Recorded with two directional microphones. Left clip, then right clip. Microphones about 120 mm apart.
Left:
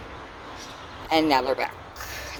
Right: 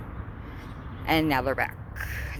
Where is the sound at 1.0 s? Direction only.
25° left (ahead or behind).